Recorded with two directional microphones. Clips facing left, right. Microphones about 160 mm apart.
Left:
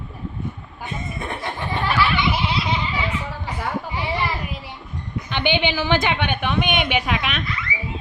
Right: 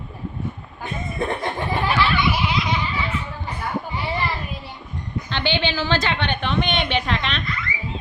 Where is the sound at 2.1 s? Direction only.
25° left (ahead or behind).